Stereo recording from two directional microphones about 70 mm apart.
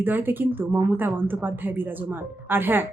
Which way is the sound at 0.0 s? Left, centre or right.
Right.